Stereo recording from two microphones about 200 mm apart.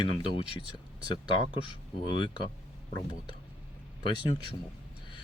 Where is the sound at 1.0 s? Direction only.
20° left (ahead or behind).